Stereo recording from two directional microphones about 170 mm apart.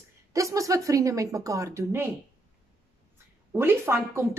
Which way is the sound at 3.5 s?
15° right (ahead or behind).